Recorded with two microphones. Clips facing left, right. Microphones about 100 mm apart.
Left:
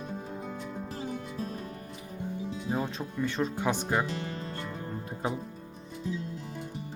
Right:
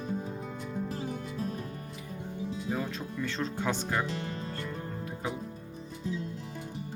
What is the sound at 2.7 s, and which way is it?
Speech, 25° left (ahead or behind).